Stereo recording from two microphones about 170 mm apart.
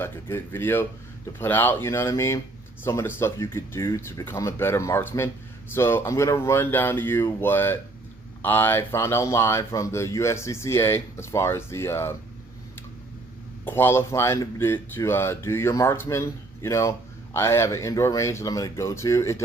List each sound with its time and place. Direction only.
0.0 s speech: 15° left (ahead or behind)
13.7 s speech: 15° left (ahead or behind)